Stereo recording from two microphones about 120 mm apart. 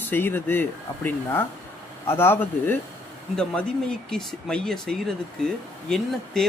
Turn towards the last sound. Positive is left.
turn(degrees=5)  # may be behind; listen again after turning